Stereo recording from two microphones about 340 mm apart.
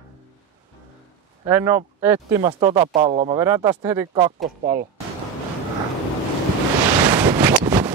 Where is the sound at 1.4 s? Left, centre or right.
Centre.